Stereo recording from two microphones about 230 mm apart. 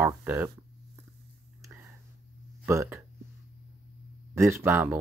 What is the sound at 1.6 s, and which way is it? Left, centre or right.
Whispering, centre.